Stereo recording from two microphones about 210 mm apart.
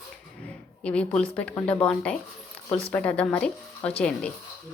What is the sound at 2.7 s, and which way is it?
Speech, 25° left (ahead or behind).